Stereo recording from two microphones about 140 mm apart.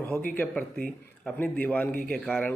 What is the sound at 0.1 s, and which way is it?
A man's voice, 15° left (ahead or behind).